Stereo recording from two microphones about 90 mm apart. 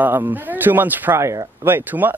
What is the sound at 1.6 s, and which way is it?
Speech, 25° right (ahead or behind).